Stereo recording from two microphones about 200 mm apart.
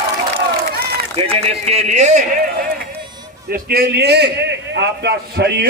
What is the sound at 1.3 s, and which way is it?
Speech, 30° right (ahead or behind).